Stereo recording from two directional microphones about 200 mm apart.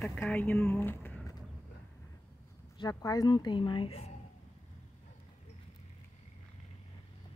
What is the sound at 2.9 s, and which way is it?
Speech, 15° left (ahead or behind).